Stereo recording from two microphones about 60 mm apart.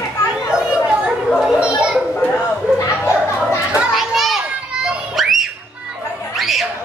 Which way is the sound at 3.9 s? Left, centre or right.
Centre.